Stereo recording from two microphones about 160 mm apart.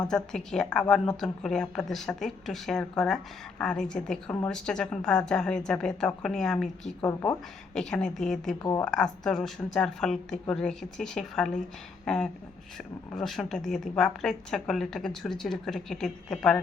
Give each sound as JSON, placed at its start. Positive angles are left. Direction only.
{"t": 0.1, "sound": "a woman's voice", "side_deg": 5}
{"t": 7.0, "sound": "speech", "side_deg": 20}
{"t": 7.7, "sound": "a woman's voice", "side_deg": 5}